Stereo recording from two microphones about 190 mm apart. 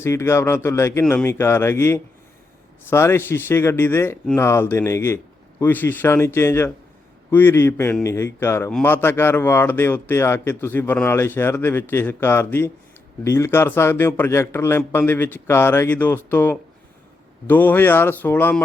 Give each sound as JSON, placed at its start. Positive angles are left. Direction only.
{"t": 0.0, "sound": "speech", "side_deg": 15}